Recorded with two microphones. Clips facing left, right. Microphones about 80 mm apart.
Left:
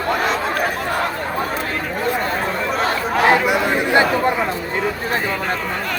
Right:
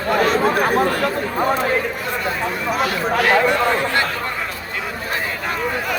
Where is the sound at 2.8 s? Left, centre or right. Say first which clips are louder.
Left 2 dB; left.